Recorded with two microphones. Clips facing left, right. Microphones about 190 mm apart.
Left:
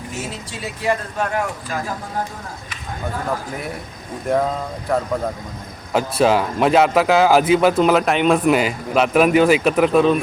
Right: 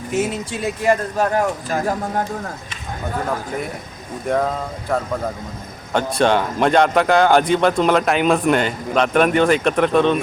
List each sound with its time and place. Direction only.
0.2 s speech: 50° right (ahead or behind)
4.9 s a man's voice: centre (ahead or behind)